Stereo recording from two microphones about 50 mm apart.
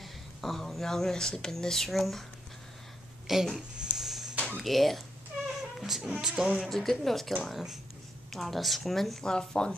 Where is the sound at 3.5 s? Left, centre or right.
Centre.